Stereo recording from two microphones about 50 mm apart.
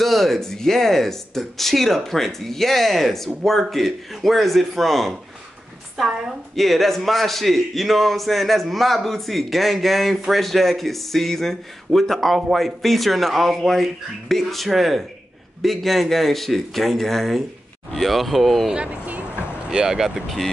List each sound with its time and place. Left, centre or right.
0.0 s a man's voice: centre
5.9 s speech: centre
6.5 s a man's voice: centre
18.9 s music: right
19.7 s speech: centre